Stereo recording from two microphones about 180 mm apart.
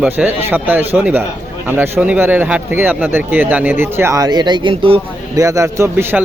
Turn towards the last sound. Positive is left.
turn(degrees=-15)  # may be behind; listen again after turning